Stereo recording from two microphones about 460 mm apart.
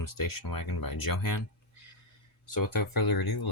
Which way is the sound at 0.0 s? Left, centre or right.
Left.